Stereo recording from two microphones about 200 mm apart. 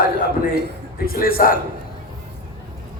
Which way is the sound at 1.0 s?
45° left (ahead or behind).